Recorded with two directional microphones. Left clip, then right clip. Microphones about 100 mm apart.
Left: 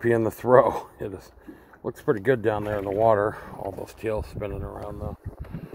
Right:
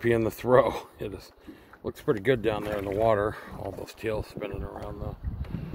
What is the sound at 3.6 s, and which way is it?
Speech, 15° left (ahead or behind).